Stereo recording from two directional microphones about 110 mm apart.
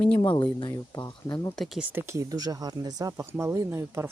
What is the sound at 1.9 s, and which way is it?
Speech, 25° right (ahead or behind).